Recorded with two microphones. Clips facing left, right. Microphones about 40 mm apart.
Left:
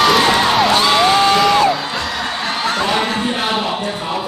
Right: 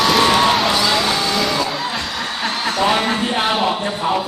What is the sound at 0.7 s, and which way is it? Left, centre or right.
Music, left.